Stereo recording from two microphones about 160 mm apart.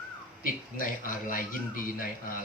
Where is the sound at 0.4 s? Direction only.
60° left (ahead or behind).